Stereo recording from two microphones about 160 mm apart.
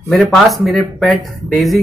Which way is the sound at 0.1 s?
Centre (ahead or behind).